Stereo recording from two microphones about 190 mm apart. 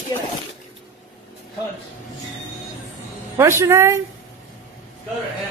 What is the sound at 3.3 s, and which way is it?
Speech, 15° right (ahead or behind).